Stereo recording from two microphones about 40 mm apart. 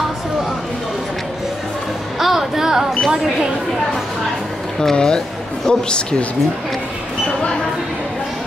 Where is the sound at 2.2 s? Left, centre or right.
Centre.